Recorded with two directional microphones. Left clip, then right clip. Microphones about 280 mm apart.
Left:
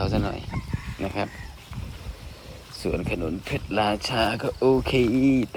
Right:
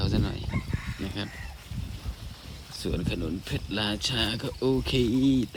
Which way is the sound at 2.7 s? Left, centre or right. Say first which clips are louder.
Left 5 dB; centre.